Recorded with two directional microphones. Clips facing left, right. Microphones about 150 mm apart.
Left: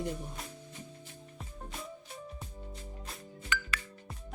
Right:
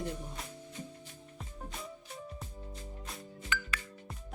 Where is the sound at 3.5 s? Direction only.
75° left (ahead or behind).